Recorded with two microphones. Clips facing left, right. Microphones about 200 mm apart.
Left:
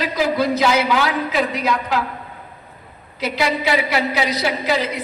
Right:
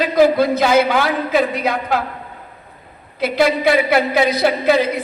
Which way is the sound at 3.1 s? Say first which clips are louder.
Right 5 dB; 55° right (ahead or behind).